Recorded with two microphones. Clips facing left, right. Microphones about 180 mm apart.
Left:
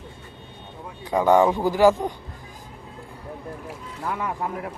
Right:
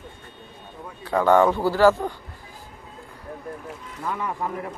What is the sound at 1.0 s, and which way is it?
Speech, 15° left (ahead or behind).